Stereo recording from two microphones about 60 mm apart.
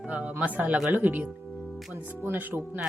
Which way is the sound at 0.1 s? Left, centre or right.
Right.